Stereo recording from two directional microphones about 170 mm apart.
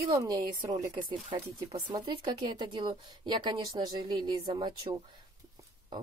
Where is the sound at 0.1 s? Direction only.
20° right (ahead or behind).